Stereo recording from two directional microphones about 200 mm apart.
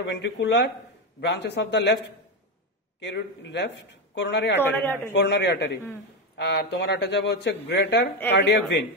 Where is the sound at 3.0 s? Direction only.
60° left (ahead or behind).